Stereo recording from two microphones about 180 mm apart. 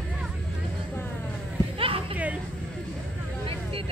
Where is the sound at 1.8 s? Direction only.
30° right (ahead or behind).